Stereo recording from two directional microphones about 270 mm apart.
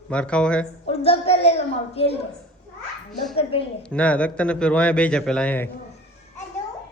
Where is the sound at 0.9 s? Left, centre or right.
Left.